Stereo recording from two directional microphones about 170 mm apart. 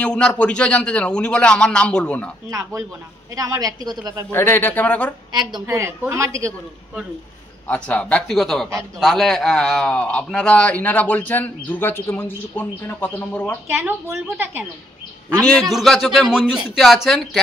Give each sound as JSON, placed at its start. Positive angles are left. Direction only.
{"t": 0.0, "sound": "a man's voice", "side_deg": 5}
{"t": 3.3, "sound": "a woman's voice", "side_deg": -20}
{"t": 4.3, "sound": "a man's voice", "side_deg": 15}
{"t": 5.3, "sound": "a woman's voice", "side_deg": -25}
{"t": 7.6, "sound": "a man's voice", "side_deg": 10}
{"t": 13.7, "sound": "a woman's voice", "side_deg": -10}
{"t": 15.7, "sound": "a man's voice", "side_deg": 0}